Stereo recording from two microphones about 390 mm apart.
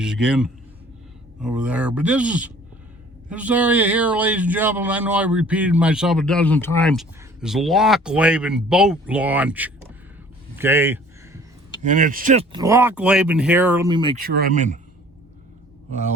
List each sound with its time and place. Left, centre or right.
0.0 s a man's voice: centre
10.6 s a sound: centre
11.8 s speech: centre